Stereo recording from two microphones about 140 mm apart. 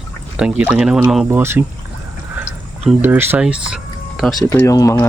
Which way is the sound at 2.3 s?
10° right (ahead or behind).